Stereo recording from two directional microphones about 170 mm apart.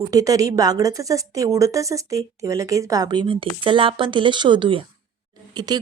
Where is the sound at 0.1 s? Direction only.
20° right (ahead or behind).